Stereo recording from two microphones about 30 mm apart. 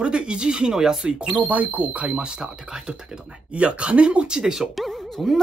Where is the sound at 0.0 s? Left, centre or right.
Right.